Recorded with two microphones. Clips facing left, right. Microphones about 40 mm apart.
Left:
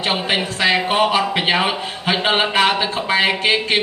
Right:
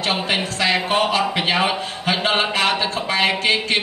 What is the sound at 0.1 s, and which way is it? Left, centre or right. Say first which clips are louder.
Speech: left 1 dB; centre.